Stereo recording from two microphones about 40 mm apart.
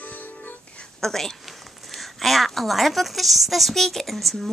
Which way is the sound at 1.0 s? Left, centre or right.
Centre.